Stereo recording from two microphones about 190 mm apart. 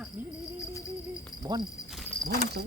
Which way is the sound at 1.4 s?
20° right (ahead or behind).